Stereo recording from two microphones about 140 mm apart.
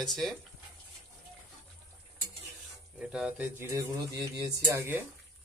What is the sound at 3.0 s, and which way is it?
Speech, 5° right (ahead or behind).